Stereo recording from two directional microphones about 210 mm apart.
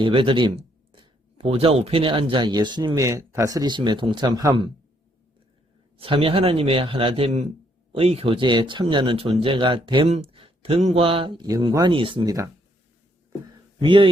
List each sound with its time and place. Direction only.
0.0 s speech: 25° right (ahead or behind)
6.0 s speech: 25° right (ahead or behind)
13.8 s speech: 25° right (ahead or behind)